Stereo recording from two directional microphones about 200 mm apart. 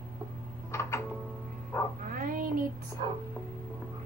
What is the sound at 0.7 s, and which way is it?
Music, 15° left (ahead or behind).